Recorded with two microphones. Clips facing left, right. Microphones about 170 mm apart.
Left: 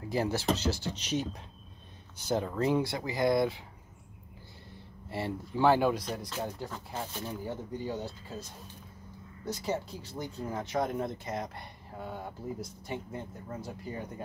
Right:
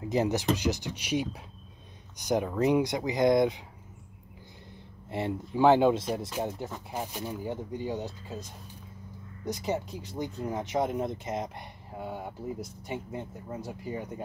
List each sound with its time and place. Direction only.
0.0 s speech: 20° right (ahead or behind)
5.1 s speech: 15° right (ahead or behind)